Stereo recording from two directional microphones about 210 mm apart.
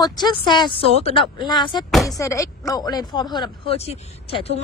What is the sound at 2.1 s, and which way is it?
A woman's voice, 15° left (ahead or behind).